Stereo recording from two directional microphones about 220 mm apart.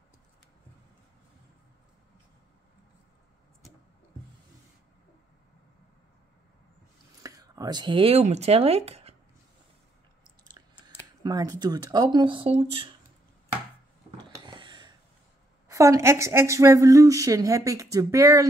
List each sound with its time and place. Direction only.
7.2 s speech: 15° right (ahead or behind)
10.6 s chewing: 20° right (ahead or behind)
11.2 s speech: 15° right (ahead or behind)
14.3 s a sound: 20° right (ahead or behind)
15.7 s a woman's voice: 15° right (ahead or behind)